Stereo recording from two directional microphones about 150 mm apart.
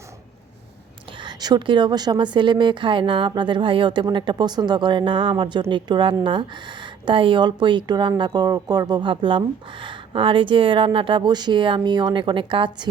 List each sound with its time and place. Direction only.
1.2 s speech: 30° right (ahead or behind)